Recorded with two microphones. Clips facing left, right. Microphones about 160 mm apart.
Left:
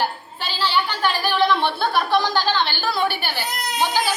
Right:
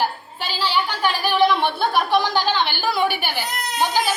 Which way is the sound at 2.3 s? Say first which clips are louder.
Even; 15° right (ahead or behind).